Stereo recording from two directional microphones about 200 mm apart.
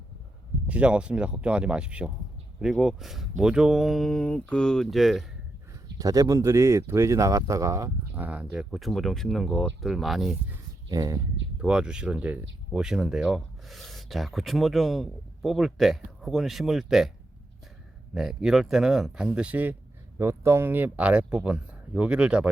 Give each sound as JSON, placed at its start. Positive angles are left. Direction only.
{"t": 0.7, "sound": "speech", "side_deg": -5}
{"t": 6.0, "sound": "speech", "side_deg": -15}
{"t": 10.8, "sound": "speech", "side_deg": -20}
{"t": 11.6, "sound": "speech", "side_deg": -5}
{"t": 18.1, "sound": "speech", "side_deg": 0}